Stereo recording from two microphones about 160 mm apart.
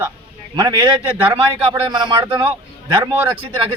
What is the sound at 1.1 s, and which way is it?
Speech, 10° right (ahead or behind).